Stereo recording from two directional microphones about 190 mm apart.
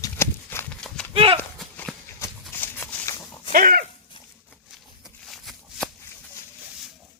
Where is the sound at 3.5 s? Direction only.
50° right (ahead or behind).